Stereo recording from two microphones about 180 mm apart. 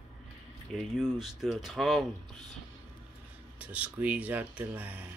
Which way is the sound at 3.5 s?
5° right (ahead or behind).